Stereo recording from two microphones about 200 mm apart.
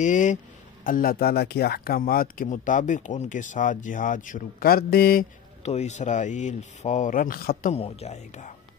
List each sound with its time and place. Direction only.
0.0 s speech: 40° left (ahead or behind)
5.6 s speech: 35° left (ahead or behind)
7.7 s speech: 30° left (ahead or behind)